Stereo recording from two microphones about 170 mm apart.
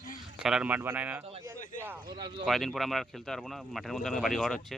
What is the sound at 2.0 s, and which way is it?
Speech, 25° right (ahead or behind).